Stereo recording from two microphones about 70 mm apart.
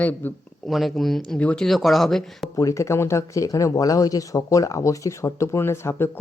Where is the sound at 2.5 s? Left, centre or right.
Left.